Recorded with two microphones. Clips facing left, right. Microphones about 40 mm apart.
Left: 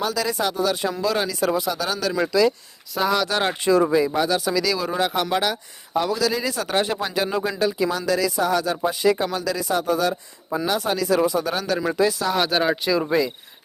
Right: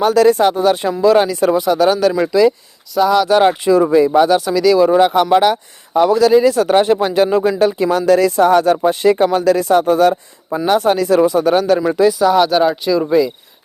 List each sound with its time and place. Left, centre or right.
0.0 s speech: right
2.9 s speech: centre
3.2 s speech: right
4.4 s speech: centre
4.8 s speech: right
7.9 s speech: right
11.8 s speech: centre